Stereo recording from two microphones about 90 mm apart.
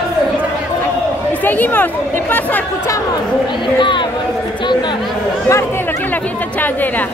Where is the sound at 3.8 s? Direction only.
65° left (ahead or behind).